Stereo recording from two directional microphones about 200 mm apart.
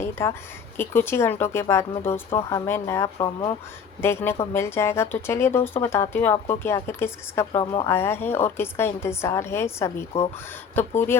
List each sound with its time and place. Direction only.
0.0 s a woman's voice: 15° left (ahead or behind)
7.6 s speech: 25° left (ahead or behind)
7.9 s a woman's voice: 10° left (ahead or behind)